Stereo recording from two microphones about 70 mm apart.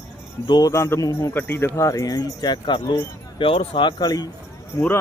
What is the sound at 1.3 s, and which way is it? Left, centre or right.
Speech, left.